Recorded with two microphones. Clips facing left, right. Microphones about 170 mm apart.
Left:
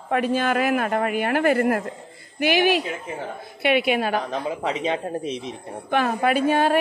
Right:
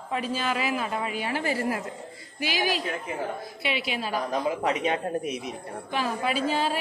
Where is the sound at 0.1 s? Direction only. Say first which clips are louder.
Left 7 dB; 60° left (ahead or behind).